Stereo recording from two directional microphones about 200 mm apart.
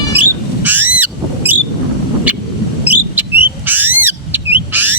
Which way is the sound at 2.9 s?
10° right (ahead or behind).